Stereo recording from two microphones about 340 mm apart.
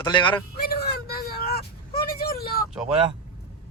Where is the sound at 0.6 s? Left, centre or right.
Left.